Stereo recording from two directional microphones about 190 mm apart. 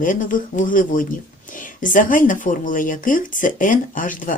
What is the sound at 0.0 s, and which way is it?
Speech, 45° left (ahead or behind).